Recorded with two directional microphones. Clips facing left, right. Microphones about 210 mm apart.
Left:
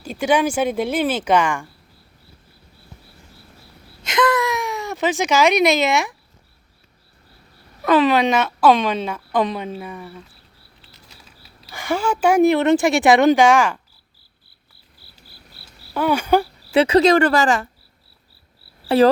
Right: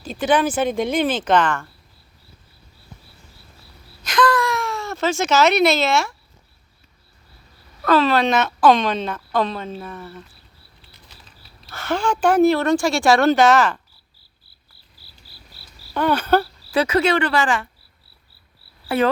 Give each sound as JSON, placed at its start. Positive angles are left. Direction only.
{"t": 0.0, "sound": "speech", "side_deg": 10}
{"t": 4.0, "sound": "a sound", "side_deg": 25}
{"t": 7.8, "sound": "speech", "side_deg": 15}
{"t": 15.0, "sound": "cricket", "side_deg": 60}
{"t": 16.0, "sound": "speech", "side_deg": 10}
{"t": 16.7, "sound": "speech", "side_deg": 30}
{"t": 18.9, "sound": "insect", "side_deg": 35}